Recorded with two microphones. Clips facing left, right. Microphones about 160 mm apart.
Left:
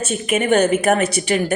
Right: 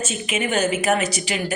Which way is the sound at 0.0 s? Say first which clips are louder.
Left 5 dB; 55° left (ahead or behind).